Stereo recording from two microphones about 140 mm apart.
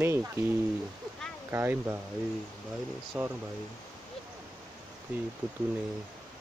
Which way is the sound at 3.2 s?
10° right (ahead or behind).